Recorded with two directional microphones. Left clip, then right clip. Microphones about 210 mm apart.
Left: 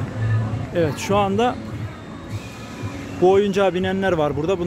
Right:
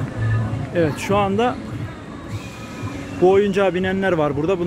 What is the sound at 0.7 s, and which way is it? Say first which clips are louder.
Speech: right 1 dB; 15° left (ahead or behind).